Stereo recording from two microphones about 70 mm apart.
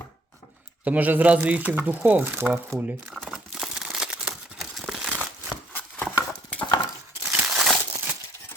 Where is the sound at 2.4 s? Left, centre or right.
Right.